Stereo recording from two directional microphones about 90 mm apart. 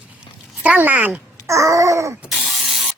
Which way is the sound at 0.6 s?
20° right (ahead or behind).